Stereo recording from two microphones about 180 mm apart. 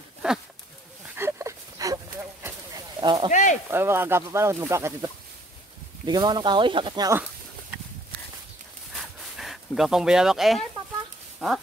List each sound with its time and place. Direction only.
0.2 s speech: 5° right (ahead or behind)
1.1 s dog: 15° right (ahead or behind)
2.4 s a sound: 20° right (ahead or behind)
3.3 s speech: 45° left (ahead or behind)
3.7 s speech: 15° right (ahead or behind)
6.0 s speech: 25° right (ahead or behind)
8.9 s a sound: centre (ahead or behind)
11.3 s speech: centre (ahead or behind)